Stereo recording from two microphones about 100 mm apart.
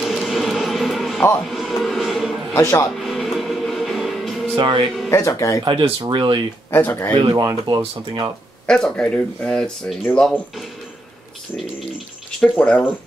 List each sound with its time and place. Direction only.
0.0 s a sound: centre (ahead or behind)
2.5 s speech: 25° left (ahead or behind)
3.0 s music: centre (ahead or behind)
4.6 s speech: 50° right (ahead or behind)
5.1 s speech: 30° left (ahead or behind)
5.6 s speech: 50° right (ahead or behind)
6.7 s speech: 25° left (ahead or behind)
7.2 s speech: 45° right (ahead or behind)
8.6 s speech: 10° left (ahead or behind)
12.4 s speech: 10° left (ahead or behind)